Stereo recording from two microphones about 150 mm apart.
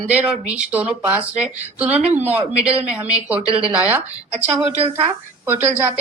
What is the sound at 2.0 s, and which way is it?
Speech, 45° right (ahead or behind).